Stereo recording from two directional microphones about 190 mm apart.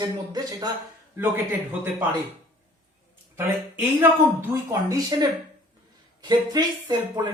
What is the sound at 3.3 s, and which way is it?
A woman's voice, 10° right (ahead or behind).